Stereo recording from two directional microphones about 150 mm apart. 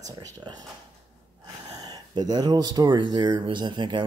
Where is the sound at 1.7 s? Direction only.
25° right (ahead or behind).